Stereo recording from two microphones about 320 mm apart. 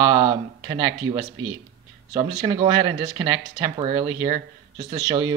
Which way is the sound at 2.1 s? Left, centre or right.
Centre.